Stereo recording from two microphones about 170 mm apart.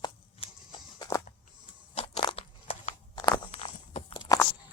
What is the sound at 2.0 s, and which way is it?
Crunch, 35° left (ahead or behind).